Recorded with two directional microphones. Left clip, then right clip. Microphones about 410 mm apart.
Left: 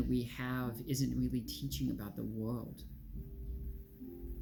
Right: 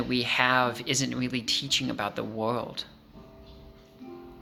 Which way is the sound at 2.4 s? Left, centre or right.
Right.